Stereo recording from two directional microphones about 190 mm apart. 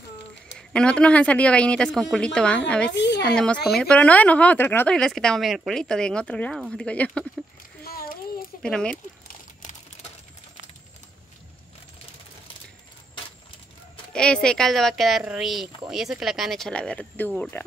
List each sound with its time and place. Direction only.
0.6 s speech: 5° left (ahead or behind)
3.0 s a woman's voice: 65° left (ahead or behind)
3.3 s speech: centre (ahead or behind)
7.8 s a sound: 50° left (ahead or behind)
8.6 s speech: 5° left (ahead or behind)
14.1 s speech: 5° left (ahead or behind)